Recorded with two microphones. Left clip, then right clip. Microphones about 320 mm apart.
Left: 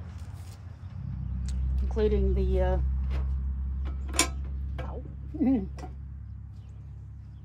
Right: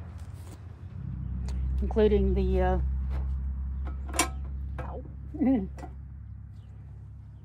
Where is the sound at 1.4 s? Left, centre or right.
Right.